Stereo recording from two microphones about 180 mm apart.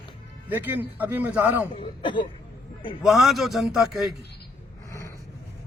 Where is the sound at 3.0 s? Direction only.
Centre (ahead or behind).